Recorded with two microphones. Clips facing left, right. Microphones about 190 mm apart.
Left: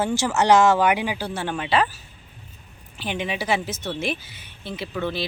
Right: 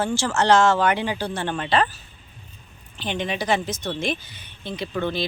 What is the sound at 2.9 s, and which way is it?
Speech, 5° left (ahead or behind).